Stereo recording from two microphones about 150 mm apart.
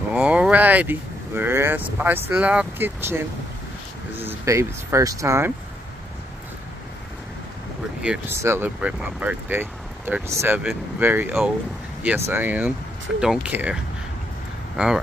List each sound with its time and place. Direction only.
0.1 s speech: 5° right (ahead or behind)
4.2 s speech: 15° right (ahead or behind)
8.0 s speech: 5° right (ahead or behind)
14.8 s speech: 10° right (ahead or behind)